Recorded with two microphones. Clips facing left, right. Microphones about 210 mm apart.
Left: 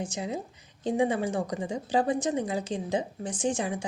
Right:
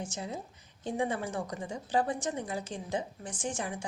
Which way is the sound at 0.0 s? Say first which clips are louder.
Left 5 dB; 15° left (ahead or behind).